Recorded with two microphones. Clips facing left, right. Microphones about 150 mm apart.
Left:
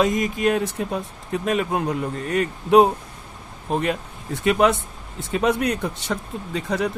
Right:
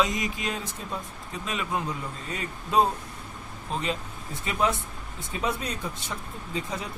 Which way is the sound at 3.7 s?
55° left (ahead or behind).